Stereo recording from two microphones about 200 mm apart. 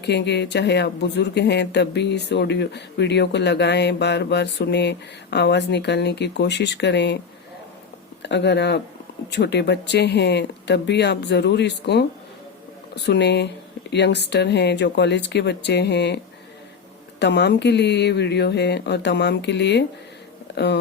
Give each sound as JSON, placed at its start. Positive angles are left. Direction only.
{"t": 0.0, "sound": "speech", "side_deg": 60}
{"t": 8.2, "sound": "speech", "side_deg": 60}
{"t": 13.1, "sound": "speech", "side_deg": 60}
{"t": 20.5, "sound": "a sound", "side_deg": 60}